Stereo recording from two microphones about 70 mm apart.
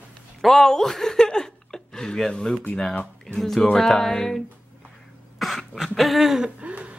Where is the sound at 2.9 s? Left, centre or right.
Centre.